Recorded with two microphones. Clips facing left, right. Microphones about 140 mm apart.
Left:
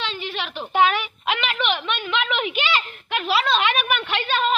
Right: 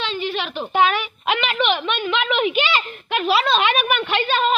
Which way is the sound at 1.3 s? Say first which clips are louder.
Right 4 dB; 30° right (ahead or behind).